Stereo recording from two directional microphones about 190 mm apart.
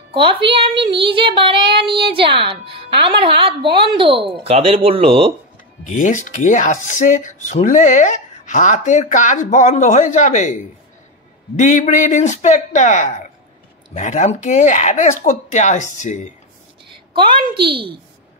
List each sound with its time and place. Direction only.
0.1 s a woman's voice: 25° right (ahead or behind)
5.9 s speech: 40° left (ahead or behind)
16.9 s a sound: 25° right (ahead or behind)